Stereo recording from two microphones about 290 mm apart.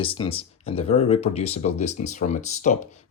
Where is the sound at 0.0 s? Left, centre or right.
Centre.